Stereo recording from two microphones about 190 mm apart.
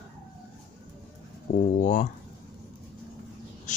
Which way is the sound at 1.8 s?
40° left (ahead or behind).